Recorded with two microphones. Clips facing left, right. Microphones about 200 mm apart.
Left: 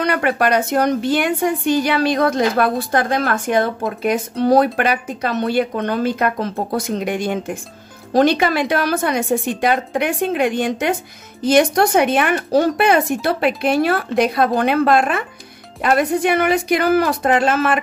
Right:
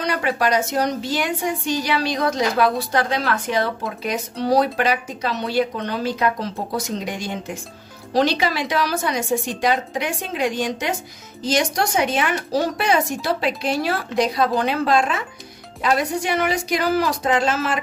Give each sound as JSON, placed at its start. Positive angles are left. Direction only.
{"t": 0.0, "sound": "speech", "side_deg": 55}